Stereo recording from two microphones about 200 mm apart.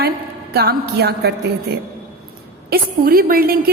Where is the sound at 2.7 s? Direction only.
45° right (ahead or behind).